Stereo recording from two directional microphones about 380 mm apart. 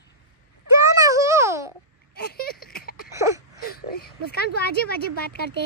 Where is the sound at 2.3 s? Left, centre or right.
Left.